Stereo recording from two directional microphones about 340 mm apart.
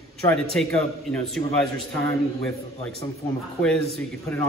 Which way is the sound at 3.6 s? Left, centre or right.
Centre.